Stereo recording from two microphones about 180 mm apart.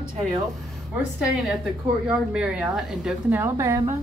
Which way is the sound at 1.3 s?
Centre (ahead or behind).